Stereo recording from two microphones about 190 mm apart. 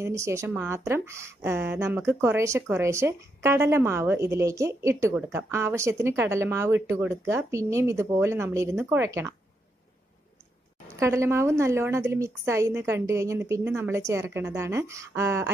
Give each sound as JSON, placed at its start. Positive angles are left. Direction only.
{"t": 0.0, "sound": "speech", "side_deg": -15}
{"t": 11.0, "sound": "speech", "side_deg": -15}